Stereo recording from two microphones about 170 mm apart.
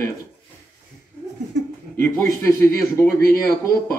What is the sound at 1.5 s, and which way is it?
Speech, 90° right.